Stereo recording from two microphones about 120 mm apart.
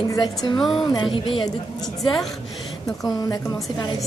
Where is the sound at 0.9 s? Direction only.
45° left (ahead or behind).